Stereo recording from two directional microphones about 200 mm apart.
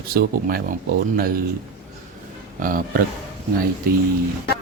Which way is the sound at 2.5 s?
45° right (ahead or behind).